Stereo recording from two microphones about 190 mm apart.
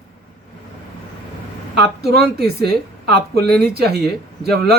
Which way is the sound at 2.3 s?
55° right (ahead or behind).